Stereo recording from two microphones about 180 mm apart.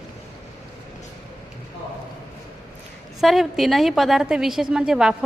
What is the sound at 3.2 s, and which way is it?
A woman's voice, centre (ahead or behind).